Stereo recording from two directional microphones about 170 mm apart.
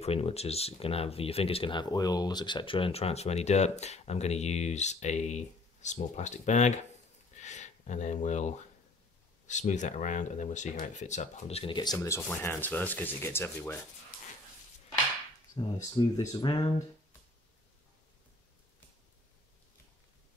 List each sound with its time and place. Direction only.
0.0 s speech: 35° left (ahead or behind)
7.3 s a sound: 45° left (ahead or behind)
9.5 s speech: 45° left (ahead or behind); by 12.2 s 20° left (ahead or behind)
12.3 s sanding: 10° left (ahead or behind)
15.6 s speech: 30° left (ahead or behind)